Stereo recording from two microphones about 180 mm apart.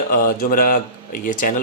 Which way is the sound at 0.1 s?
50° left (ahead or behind).